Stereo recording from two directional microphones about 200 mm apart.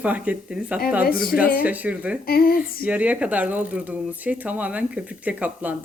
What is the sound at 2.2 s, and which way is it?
Speech, 50° left (ahead or behind).